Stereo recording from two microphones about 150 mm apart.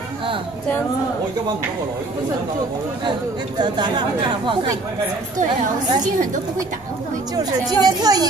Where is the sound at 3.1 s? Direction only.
30° right (ahead or behind).